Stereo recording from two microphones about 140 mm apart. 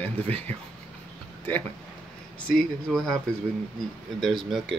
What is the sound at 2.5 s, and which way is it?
Speech, centre (ahead or behind).